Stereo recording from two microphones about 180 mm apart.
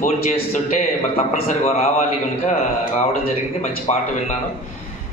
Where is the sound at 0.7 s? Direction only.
45° left (ahead or behind).